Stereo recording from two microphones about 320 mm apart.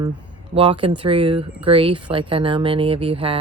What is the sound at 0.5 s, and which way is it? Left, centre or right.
Speech, centre.